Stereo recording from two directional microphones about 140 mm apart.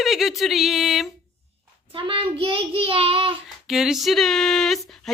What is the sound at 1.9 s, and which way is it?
A child's voice, 35° right (ahead or behind).